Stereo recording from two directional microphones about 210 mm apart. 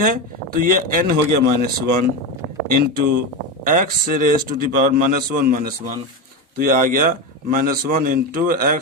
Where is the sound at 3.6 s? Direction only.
40° right (ahead or behind).